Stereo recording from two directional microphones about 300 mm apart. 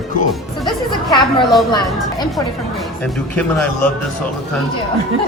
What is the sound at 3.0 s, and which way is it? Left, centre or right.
Speech, centre.